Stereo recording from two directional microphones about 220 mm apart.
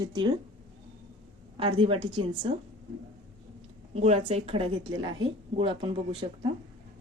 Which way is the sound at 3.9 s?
30° right (ahead or behind).